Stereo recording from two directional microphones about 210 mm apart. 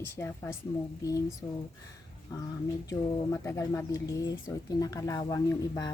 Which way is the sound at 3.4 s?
15° left (ahead or behind).